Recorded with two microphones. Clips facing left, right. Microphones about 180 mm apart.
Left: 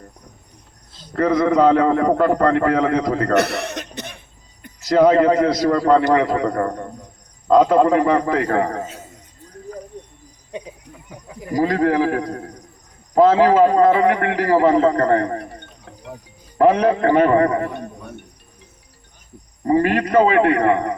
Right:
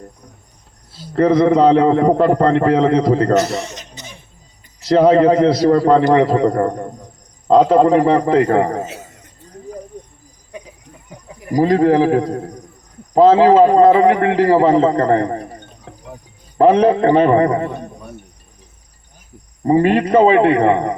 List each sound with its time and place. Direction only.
1.1 s a man's voice: 25° right (ahead or behind)
3.3 s cough: 60° left (ahead or behind)
4.9 s a man's voice: 30° right (ahead or behind)
11.5 s a man's voice: 25° right (ahead or behind)
16.6 s a man's voice: 30° right (ahead or behind)
19.6 s a man's voice: 25° right (ahead or behind)